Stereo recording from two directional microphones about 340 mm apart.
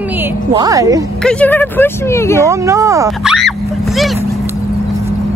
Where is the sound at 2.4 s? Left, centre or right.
Centre.